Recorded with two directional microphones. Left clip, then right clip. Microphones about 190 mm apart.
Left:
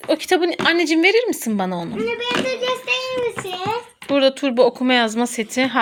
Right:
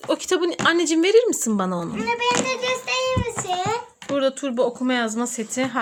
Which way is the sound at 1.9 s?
45° right (ahead or behind).